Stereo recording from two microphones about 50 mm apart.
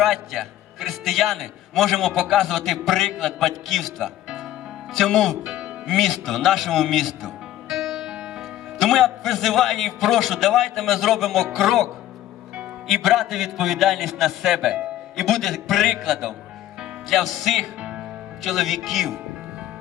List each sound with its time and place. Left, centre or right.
0.0 s a man's voice: centre
5.0 s speech: centre
5.4 s music: centre
5.9 s a man's voice: centre
7.7 s music: centre
8.8 s a man's voice: centre
12.9 s a man's voice: centre
15.2 s a man's voice: centre
17.7 s music: right
18.4 s a man's voice: centre